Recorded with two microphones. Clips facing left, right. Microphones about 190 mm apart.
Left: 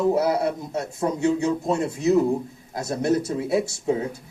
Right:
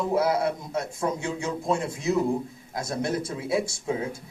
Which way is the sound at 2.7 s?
40° left (ahead or behind).